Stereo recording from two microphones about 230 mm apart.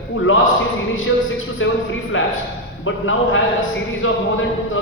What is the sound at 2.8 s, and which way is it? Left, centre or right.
Speech, left.